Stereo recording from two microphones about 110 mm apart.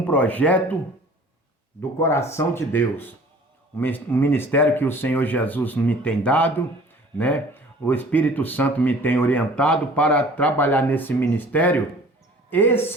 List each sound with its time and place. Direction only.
0.1 s speech: 15° left (ahead or behind)
2.0 s speech: 25° left (ahead or behind)